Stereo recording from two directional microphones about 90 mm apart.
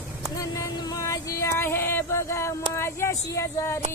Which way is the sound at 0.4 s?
40° left (ahead or behind).